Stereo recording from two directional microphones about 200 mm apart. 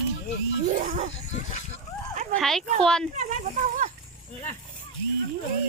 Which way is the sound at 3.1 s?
40° right (ahead or behind).